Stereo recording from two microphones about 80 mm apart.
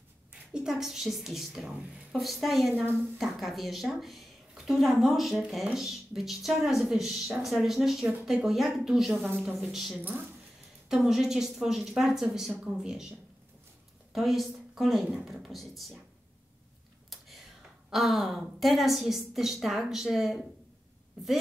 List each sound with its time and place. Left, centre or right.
0.5 s a woman's voice: centre
2.7 s speech: right
3.2 s a woman's voice: centre
8.0 s speech: centre
8.5 s a woman's voice: centre
14.1 s a woman's voice: centre
17.1 s whispering: centre
17.9 s a woman's voice: centre